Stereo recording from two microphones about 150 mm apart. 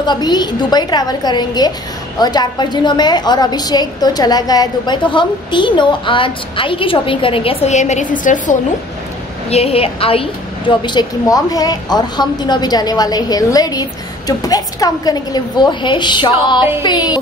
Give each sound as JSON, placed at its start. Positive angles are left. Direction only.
{"t": 0.0, "sound": "a woman's voice", "side_deg": 30}
{"t": 9.5, "sound": "a woman's voice", "side_deg": 40}